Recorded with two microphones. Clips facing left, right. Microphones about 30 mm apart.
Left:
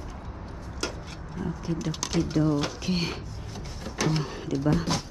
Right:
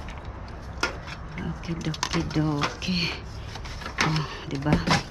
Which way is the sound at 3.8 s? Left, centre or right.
Right.